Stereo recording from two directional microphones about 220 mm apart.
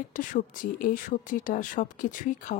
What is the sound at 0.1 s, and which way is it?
Speech, 35° left (ahead or behind).